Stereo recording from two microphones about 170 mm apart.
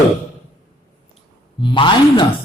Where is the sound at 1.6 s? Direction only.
30° left (ahead or behind).